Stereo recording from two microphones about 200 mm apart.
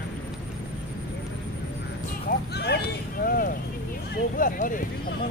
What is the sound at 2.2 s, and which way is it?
Speech, 55° left (ahead or behind).